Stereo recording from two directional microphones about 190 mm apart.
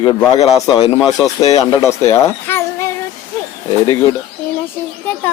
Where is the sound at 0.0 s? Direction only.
30° left (ahead or behind).